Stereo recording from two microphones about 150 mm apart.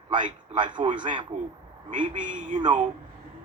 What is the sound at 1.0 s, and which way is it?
Speech, 30° right (ahead or behind).